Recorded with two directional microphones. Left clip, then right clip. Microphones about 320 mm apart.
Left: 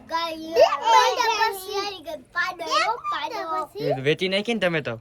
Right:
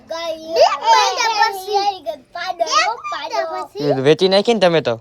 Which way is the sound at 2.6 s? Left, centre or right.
Centre.